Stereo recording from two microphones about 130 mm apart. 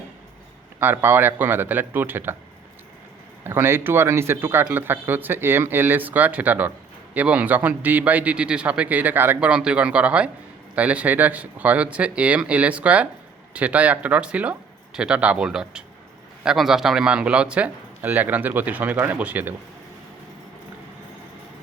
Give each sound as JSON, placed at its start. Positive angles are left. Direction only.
{"t": 0.8, "sound": "speech", "side_deg": -15}
{"t": 3.4, "sound": "speech", "side_deg": -20}